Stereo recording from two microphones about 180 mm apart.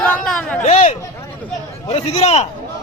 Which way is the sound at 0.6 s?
35° left (ahead or behind).